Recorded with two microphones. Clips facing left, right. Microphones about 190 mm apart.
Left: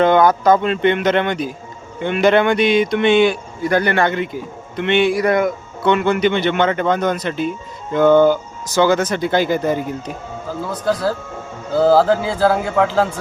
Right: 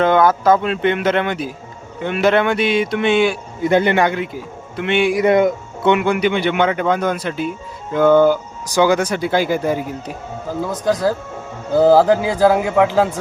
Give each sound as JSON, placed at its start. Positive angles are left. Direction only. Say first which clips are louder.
{"t": 0.0, "sound": "speech", "louder": "left 1 dB", "side_deg": -5}
{"t": 3.6, "sound": "speech", "louder": "right 2 dB", "side_deg": -20}
{"t": 4.1, "sound": "speech", "louder": "left 1 dB", "side_deg": -5}
{"t": 5.1, "sound": "speech", "louder": "right 3 dB", "side_deg": -25}